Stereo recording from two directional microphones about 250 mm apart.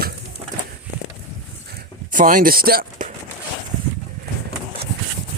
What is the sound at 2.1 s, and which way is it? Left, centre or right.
Speech, right.